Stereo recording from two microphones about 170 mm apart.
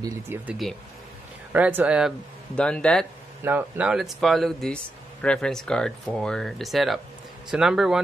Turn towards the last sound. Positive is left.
turn(degrees=-5)  # may be behind; listen again after turning